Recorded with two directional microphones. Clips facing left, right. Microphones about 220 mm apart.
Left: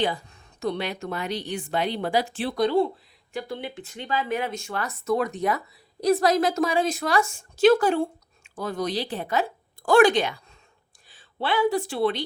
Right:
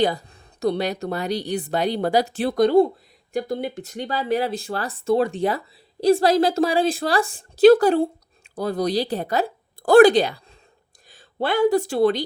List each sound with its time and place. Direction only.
0.0 s speech: 40° right (ahead or behind)